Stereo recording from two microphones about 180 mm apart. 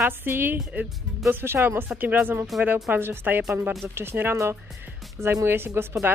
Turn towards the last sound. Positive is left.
turn(degrees=-10)  # may be behind; listen again after turning